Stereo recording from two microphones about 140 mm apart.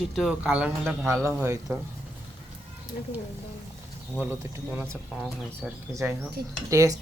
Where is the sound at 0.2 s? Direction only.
5° right (ahead or behind).